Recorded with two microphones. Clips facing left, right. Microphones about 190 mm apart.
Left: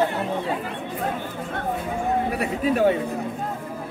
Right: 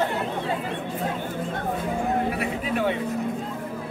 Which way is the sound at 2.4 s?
40° left (ahead or behind).